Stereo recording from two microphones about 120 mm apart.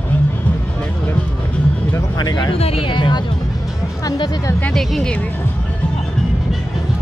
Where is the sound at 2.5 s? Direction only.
55° left (ahead or behind).